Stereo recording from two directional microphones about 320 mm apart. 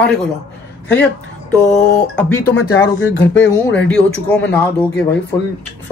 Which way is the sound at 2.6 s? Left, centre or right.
Left.